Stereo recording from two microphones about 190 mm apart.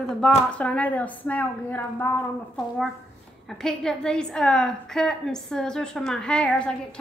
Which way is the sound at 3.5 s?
Centre (ahead or behind).